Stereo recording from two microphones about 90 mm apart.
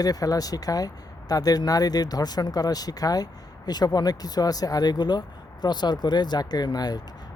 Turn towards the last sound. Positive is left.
turn(degrees=50)  # may be behind; listen again after turning